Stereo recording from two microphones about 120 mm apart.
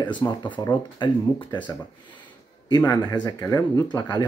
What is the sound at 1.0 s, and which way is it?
Speech, 40° left (ahead or behind).